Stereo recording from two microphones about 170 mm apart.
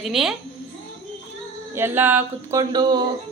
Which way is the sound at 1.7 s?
15° right (ahead or behind).